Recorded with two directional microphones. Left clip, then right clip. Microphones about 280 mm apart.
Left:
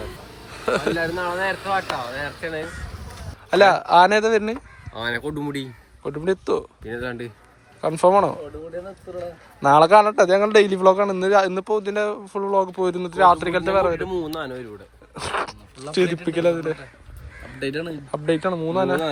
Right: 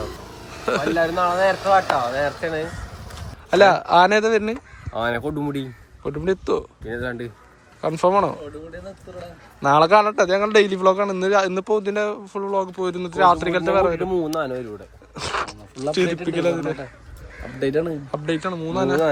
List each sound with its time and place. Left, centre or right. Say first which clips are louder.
0.5 s speech: even; centre
0.9 s speech: right 5 dB; right
3.5 s a man's voice: even; centre
9.6 s a man's voice: left 2 dB; centre
15.1 s a sound: even; centre
16.2 s a man's voice: left 1 dB; centre
18.1 s a man's voice: left 3 dB; centre